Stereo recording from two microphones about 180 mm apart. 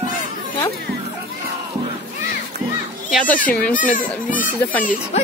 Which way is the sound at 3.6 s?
50° left (ahead or behind).